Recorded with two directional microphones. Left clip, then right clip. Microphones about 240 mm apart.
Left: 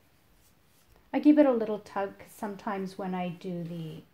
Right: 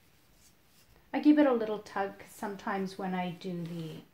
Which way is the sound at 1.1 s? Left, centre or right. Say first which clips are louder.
Left 3 dB; left.